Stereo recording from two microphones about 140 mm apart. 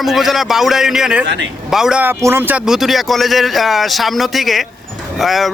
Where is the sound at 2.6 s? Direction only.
Centre (ahead or behind).